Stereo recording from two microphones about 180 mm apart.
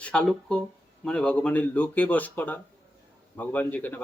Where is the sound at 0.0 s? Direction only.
5° left (ahead or behind).